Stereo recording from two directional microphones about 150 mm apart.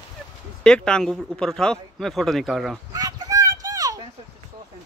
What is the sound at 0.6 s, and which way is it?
Speech, 5° left (ahead or behind).